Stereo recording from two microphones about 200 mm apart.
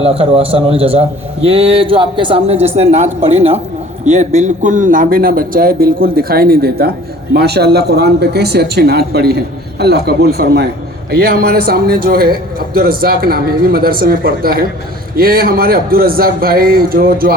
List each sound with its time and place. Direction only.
0.0 s a man's voice: 30° right (ahead or behind); by 17.3 s 50° right (ahead or behind)